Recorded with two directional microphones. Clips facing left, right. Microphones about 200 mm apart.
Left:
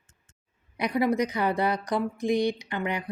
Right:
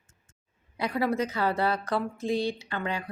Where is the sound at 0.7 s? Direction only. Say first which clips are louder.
Left 3 dB; 15° left (ahead or behind).